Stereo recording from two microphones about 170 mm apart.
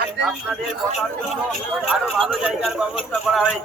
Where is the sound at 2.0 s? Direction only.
5° right (ahead or behind).